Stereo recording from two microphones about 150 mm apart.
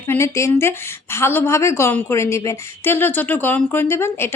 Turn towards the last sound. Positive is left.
turn(degrees=15)  # may be behind; listen again after turning